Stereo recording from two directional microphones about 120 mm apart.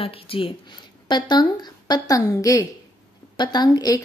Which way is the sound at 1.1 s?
35° left (ahead or behind).